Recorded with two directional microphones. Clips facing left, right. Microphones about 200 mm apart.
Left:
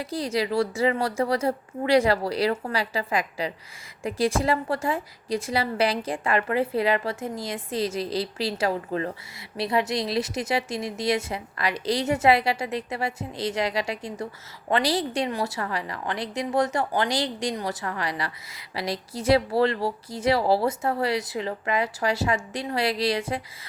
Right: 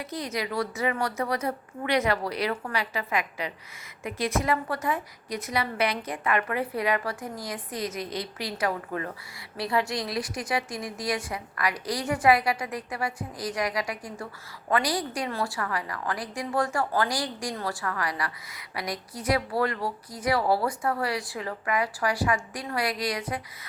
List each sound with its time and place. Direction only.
0.0 s a woman's voice: 30° left (ahead or behind)